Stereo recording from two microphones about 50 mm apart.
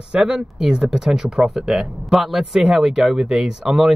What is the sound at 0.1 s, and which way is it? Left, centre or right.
Speech, centre.